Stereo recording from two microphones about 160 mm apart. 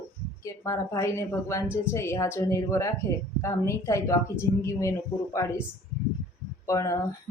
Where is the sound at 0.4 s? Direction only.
20° left (ahead or behind).